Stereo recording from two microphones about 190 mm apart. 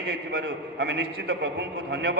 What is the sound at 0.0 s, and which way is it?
A man's voice, 60° right (ahead or behind).